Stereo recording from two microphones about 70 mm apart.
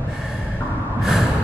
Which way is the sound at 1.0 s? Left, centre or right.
Centre.